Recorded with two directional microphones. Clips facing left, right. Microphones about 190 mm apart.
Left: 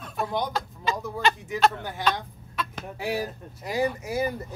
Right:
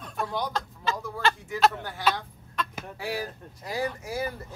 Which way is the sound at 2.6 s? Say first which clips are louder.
Even; 5° left (ahead or behind).